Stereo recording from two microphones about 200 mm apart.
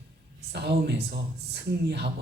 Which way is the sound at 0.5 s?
55° right (ahead or behind).